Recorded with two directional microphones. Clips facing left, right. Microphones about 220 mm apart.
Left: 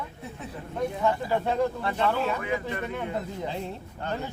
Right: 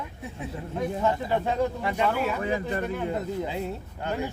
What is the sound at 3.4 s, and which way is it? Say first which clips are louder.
Speech: right 3 dB; 5° right (ahead or behind).